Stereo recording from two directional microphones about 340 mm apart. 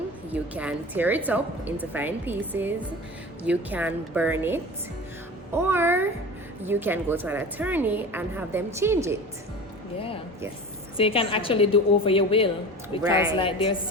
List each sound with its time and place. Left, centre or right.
0.3 s a woman's voice: centre
5.6 s a woman's voice: centre
10.9 s a woman's voice: centre